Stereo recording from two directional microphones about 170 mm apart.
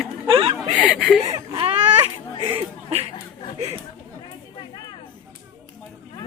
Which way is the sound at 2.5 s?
35° right (ahead or behind).